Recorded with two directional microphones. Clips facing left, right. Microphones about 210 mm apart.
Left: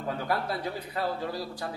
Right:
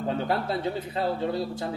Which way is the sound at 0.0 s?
25° right (ahead or behind).